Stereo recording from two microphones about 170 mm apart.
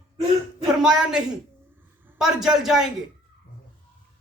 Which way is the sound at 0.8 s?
5° right (ahead or behind).